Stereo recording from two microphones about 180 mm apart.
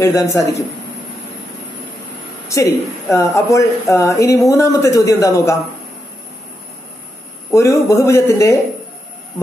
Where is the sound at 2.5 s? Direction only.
15° left (ahead or behind).